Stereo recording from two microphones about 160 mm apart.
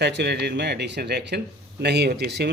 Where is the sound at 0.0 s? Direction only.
90° right.